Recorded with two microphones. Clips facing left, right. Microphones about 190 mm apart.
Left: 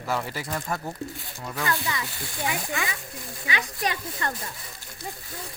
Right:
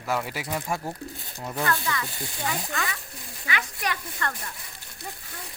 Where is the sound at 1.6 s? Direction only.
15° left (ahead or behind).